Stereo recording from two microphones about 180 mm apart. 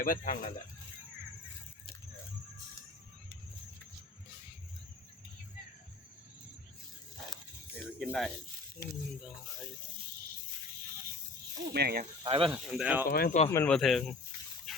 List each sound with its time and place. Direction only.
0.0 s speech: 50° left (ahead or behind)
8.0 s speech: centre (ahead or behind)
11.7 s speech: 60° right (ahead or behind)
12.2 s speech: 30° right (ahead or behind)
12.5 s speech: 5° right (ahead or behind)
13.1 s speech: 55° left (ahead or behind)
13.7 s speech: centre (ahead or behind)
14.7 s a sound: centre (ahead or behind)